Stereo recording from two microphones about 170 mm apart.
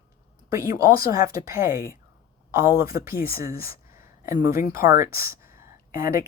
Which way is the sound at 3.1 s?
60° left (ahead or behind).